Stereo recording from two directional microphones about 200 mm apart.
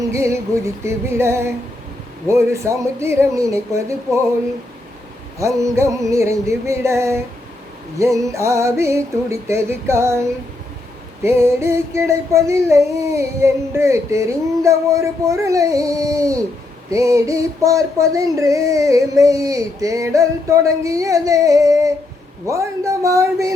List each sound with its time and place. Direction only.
0.0 s female singing: 15° right (ahead or behind)
5.4 s female singing: 15° right (ahead or behind)